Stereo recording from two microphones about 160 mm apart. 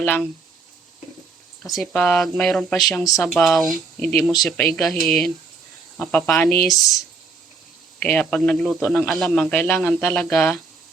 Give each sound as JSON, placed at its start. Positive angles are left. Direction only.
{"t": 0.0, "sound": "speech", "side_deg": 10}
{"t": 1.6, "sound": "a man's voice", "side_deg": 0}
{"t": 7.9, "sound": "a man's voice", "side_deg": 10}